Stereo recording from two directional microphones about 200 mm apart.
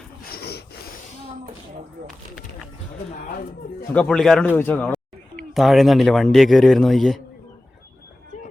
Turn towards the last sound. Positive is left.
turn(degrees=0)  # may be behind; listen again after turning